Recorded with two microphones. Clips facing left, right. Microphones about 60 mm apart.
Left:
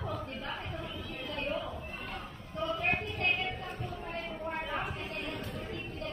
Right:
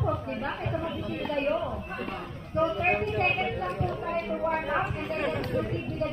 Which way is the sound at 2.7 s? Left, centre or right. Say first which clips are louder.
Right 6 dB; right.